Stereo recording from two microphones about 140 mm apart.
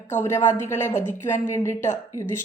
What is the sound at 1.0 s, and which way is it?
Speech, 65° left (ahead or behind).